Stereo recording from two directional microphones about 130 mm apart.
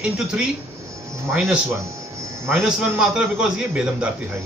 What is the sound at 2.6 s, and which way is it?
A man's voice, 5° right (ahead or behind).